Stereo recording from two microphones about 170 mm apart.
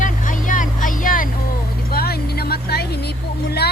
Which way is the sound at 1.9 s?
65° left (ahead or behind).